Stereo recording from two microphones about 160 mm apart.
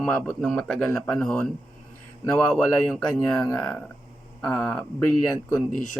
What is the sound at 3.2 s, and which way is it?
Speech, 5° left (ahead or behind).